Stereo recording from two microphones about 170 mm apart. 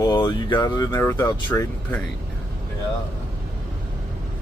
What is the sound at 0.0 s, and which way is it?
Speech, 25° left (ahead or behind).